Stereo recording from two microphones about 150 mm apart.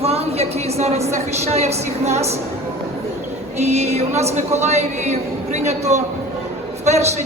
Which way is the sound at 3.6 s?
45° right (ahead or behind).